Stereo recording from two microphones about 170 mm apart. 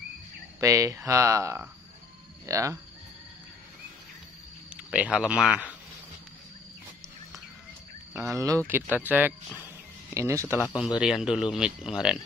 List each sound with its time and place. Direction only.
0.6 s speech: 20° right (ahead or behind)
4.6 s speech: 5° right (ahead or behind)
8.1 s speech: 20° right (ahead or behind)
10.8 s speech: 5° right (ahead or behind)